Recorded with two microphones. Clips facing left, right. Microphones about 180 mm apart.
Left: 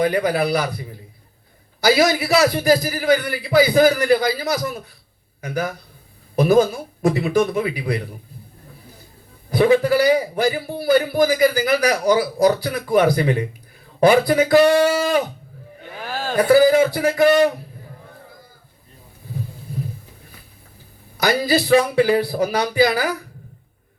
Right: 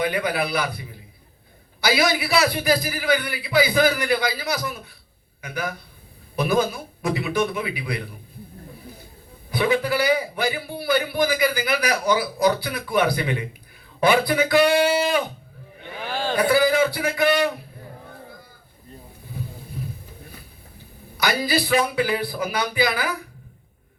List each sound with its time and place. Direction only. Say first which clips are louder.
0.0 s a man's voice: left 5 dB; 40° left (ahead or behind)
9.5 s a man's voice: left 7 dB; 40° left (ahead or behind)
16.0 s speech: even; 5° left (ahead or behind)
16.3 s a man's voice: left 6 dB; 45° left (ahead or behind)
21.2 s a man's voice: left 4 dB; 40° left (ahead or behind)